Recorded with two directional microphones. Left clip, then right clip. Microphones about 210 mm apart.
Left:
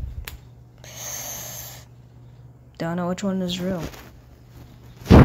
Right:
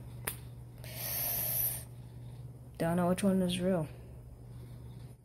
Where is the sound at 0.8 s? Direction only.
20° left (ahead or behind).